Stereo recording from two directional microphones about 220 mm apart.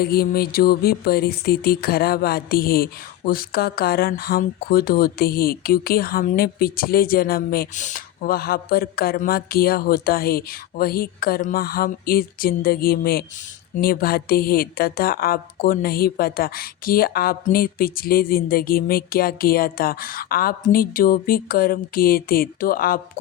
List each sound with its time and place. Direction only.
0.0 s a woman's voice: 45° left (ahead or behind)